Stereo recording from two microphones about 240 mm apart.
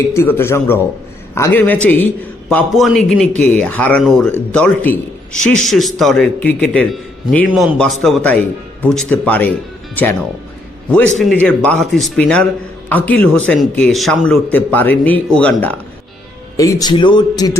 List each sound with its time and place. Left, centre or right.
0.1 s a man's voice: centre
11.4 s a man's voice: centre